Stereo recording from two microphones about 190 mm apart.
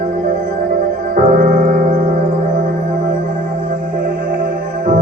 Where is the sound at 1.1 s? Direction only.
45° right (ahead or behind).